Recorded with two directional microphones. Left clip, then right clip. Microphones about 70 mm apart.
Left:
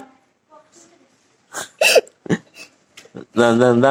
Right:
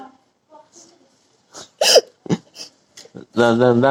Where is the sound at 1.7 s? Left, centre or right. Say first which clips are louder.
Even; right.